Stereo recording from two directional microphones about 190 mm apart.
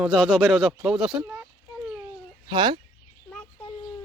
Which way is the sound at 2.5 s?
20° right (ahead or behind).